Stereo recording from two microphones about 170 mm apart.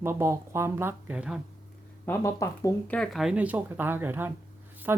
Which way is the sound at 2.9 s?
Centre (ahead or behind).